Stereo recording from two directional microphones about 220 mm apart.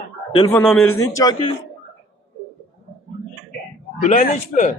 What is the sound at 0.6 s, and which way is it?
Speech, 10° left (ahead or behind).